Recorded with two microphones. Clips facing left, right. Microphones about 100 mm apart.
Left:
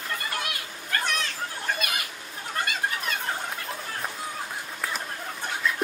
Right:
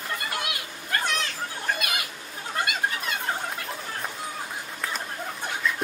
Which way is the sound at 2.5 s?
15° right (ahead or behind).